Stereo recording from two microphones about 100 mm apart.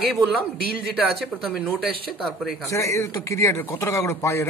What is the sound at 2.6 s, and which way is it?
Speech, 30° left (ahead or behind).